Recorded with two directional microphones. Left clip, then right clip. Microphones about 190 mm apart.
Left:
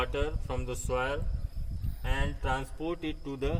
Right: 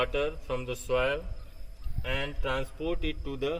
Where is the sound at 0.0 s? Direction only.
25° left (ahead or behind).